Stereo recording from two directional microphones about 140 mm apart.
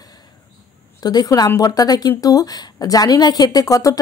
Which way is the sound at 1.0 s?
25° left (ahead or behind).